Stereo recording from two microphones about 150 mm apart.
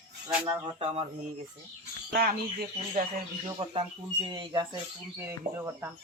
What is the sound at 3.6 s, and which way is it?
Speech, 35° right (ahead or behind).